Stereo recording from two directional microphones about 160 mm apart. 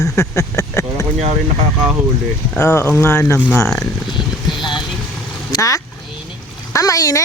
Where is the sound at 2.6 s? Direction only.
10° left (ahead or behind).